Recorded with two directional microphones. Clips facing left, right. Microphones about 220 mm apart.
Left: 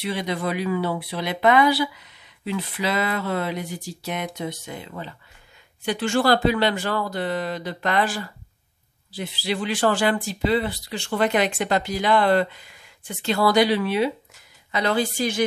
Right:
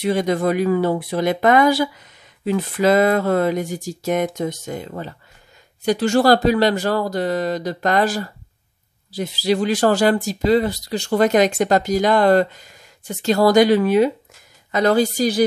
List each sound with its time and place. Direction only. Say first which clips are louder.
0.0 s speech: right 8 dB; 45° right (ahead or behind)